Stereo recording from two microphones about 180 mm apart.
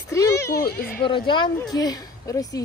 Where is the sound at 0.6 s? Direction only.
60° left (ahead or behind).